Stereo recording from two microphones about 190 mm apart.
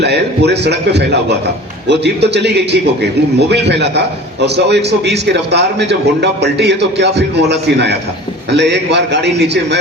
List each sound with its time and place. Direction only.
0.0 s a man's voice: 60° right (ahead or behind)